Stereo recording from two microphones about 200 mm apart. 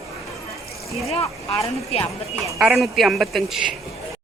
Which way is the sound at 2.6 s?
Centre (ahead or behind).